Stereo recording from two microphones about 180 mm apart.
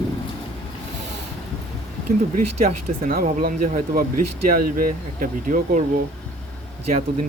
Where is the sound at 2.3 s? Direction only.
50° right (ahead or behind).